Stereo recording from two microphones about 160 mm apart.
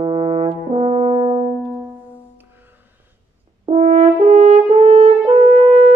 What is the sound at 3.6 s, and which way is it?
French horn, 45° right (ahead or behind).